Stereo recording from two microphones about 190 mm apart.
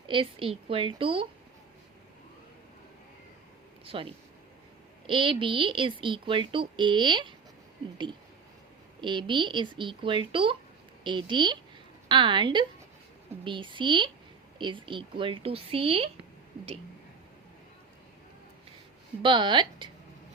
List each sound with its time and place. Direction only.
0.1 s speech: 25° right (ahead or behind)
3.8 s speech: 30° right (ahead or behind)
9.0 s speech: 25° right (ahead or behind)
19.2 s speech: 25° right (ahead or behind)